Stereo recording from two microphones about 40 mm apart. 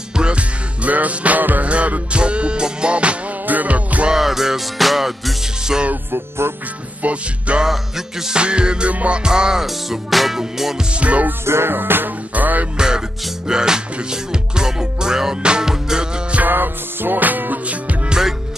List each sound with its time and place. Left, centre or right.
0.1 s music: right
0.8 s music: right
1.7 s music: right
3.4 s music: right
4.1 s music: centre
6.1 s music: right
7.0 s music: right; by 10.8 s centre
11.0 s music: right
11.4 s music: right
12.7 s music: centre
16.4 s music: right